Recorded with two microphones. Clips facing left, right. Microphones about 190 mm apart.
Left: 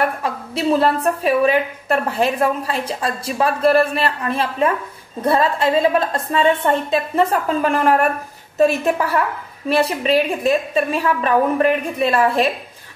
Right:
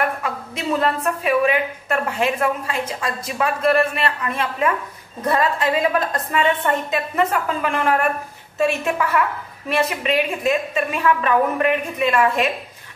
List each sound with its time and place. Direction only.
0.2 s a woman's voice: 35° left (ahead or behind)